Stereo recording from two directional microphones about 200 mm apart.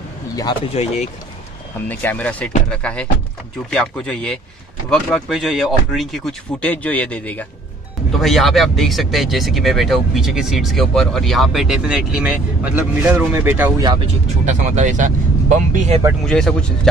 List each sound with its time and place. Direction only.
0.7 s speech: 35° left (ahead or behind)
1.9 s speech: 10° left (ahead or behind); by 13.8 s 10° right (ahead or behind)
14.5 s speech: 40° right (ahead or behind)
16.3 s speech: 5° left (ahead or behind)